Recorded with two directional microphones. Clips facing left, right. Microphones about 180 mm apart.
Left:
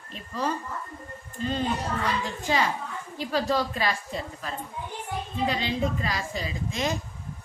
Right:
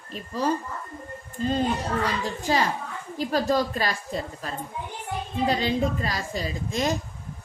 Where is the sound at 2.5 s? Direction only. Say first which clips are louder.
Right 1 dB; 35° right (ahead or behind).